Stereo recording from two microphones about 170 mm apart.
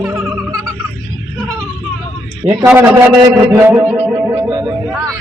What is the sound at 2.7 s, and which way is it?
A man's voice, 15° right (ahead or behind).